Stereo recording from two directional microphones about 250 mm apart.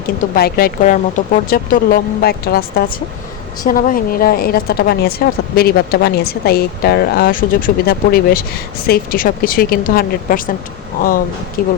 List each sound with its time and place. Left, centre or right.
0.3 s a woman's voice: left
11.6 s a woman's voice: left